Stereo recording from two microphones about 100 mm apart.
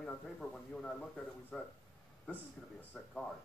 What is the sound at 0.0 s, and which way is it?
Speech, 10° left (ahead or behind).